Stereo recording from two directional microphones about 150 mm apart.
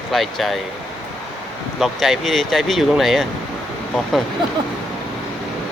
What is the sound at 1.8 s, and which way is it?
Speech, centre (ahead or behind).